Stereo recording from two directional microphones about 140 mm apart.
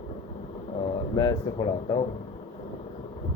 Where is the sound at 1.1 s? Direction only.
30° left (ahead or behind).